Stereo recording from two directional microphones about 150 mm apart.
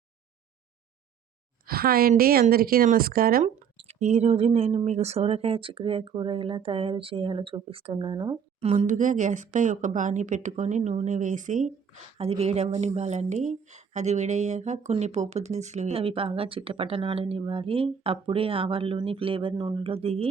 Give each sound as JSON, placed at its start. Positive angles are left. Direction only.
{"t": 1.6, "sound": "a woman's voice", "side_deg": -90}
{"t": 3.8, "sound": "speech", "side_deg": -45}
{"t": 8.6, "sound": "speech", "side_deg": -45}
{"t": 12.1, "sound": "speech", "side_deg": -40}